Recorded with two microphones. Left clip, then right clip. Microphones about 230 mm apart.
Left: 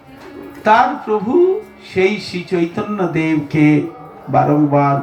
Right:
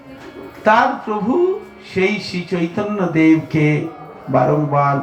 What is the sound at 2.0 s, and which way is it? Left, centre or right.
Mantra, left.